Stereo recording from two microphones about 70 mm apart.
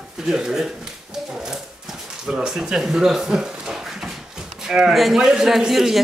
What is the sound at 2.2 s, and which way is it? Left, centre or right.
A man's voice, centre.